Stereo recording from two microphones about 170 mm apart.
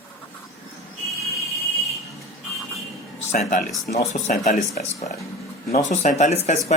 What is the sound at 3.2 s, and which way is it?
A man's voice, 40° left (ahead or behind).